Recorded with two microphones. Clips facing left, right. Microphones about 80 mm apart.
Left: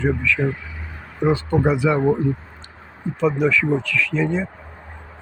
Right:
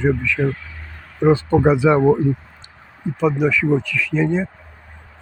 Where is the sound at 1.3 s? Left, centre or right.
Right.